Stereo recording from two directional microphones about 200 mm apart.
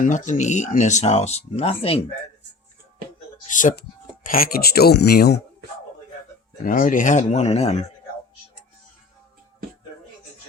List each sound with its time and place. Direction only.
0.0 s speech: 40° left (ahead or behind)
3.5 s speech: 40° left (ahead or behind)
6.7 s speech: 40° left (ahead or behind)